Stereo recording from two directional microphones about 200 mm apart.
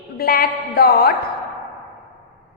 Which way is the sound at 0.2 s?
50° left (ahead or behind).